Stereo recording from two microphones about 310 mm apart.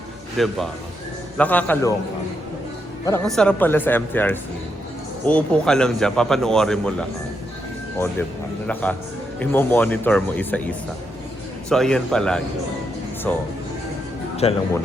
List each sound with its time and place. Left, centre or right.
0.3 s a man's voice: centre
3.1 s a man's voice: centre
8.6 s a man's voice: centre
11.7 s a man's voice: centre
14.4 s speech: centre